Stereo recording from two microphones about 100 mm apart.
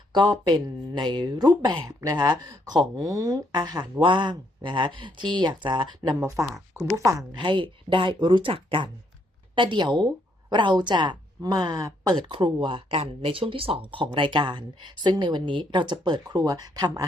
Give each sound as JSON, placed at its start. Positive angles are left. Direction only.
{"t": 0.1, "sound": "speech", "side_deg": -50}
{"t": 1.9, "sound": "speech", "side_deg": -35}
{"t": 2.1, "sound": "speech", "side_deg": -45}
{"t": 7.3, "sound": "speech", "side_deg": -55}
{"t": 12.3, "sound": "speech", "side_deg": -55}